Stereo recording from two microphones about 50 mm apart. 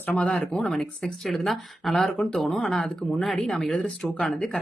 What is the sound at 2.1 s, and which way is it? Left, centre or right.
Speech, centre.